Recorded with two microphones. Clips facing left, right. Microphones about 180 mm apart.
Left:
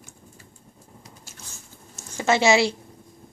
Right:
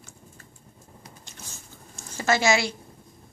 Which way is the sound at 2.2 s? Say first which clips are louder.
Left 4 dB; 25° left (ahead or behind).